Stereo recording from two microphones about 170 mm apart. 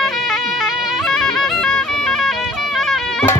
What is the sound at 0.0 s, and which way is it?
Music, centre (ahead or behind).